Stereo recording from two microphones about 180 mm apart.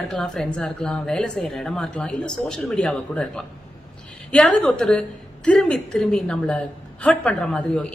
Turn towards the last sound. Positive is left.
turn(degrees=5)  # may be behind; listen again after turning